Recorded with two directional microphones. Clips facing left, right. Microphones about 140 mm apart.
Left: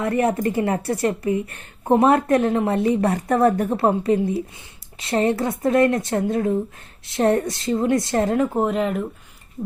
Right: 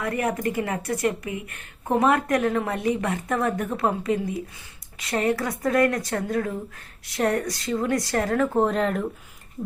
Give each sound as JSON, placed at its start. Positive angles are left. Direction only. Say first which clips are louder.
{"t": 0.0, "sound": "speech", "louder": "left 5 dB", "side_deg": 30}
{"t": 8.5, "sound": "speech", "louder": "left 1 dB", "side_deg": 5}